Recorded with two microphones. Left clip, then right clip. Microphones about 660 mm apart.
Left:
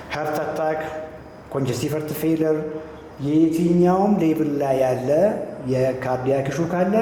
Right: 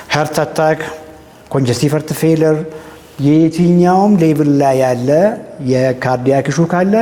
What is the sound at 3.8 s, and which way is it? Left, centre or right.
A man's voice, right.